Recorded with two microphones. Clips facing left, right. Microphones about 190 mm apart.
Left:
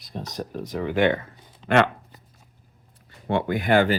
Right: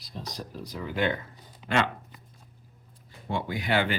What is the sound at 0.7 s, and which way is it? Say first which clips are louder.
Speech: left 7 dB; 75° left (ahead or behind).